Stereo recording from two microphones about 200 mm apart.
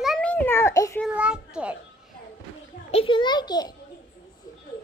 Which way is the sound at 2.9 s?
25° left (ahead or behind).